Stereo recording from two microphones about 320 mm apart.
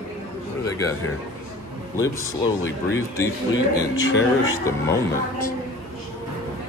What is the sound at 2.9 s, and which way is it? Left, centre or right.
Speech, centre.